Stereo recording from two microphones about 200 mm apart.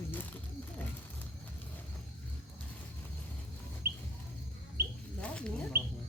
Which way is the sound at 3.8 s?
55° right (ahead or behind).